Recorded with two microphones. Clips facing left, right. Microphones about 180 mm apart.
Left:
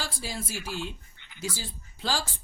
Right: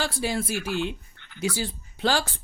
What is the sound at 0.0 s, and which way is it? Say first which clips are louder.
Speech: right 9 dB; 65° right (ahead or behind).